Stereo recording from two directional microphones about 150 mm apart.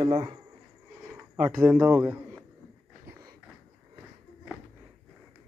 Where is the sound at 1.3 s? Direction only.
10° right (ahead or behind).